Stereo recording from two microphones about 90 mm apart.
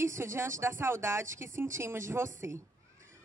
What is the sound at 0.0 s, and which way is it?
Speech, 30° right (ahead or behind).